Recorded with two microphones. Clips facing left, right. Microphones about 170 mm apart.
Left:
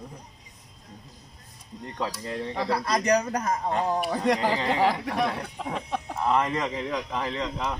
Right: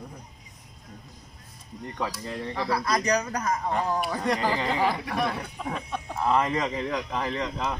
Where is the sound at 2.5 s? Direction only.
30° left (ahead or behind).